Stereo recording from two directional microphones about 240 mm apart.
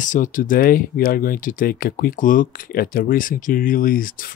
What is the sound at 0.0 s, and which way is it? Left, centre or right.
Speech, left.